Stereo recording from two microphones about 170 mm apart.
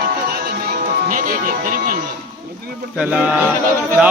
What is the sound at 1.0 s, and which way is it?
Music, 55° right (ahead or behind).